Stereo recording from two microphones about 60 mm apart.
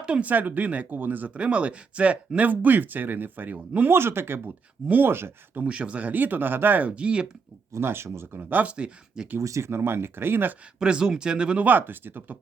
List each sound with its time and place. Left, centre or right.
0.0 s speech: centre; by 4.4 s right
4.4 s speech: right
5.6 s speech: centre
6.9 s speech: centre
7.7 s speech: right
8.4 s speech: right
8.7 s speech: centre
9.4 s speech: right
10.8 s speech: centre
11.6 s speech: right